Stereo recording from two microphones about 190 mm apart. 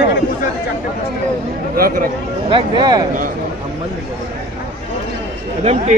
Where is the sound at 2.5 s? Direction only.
25° right (ahead or behind).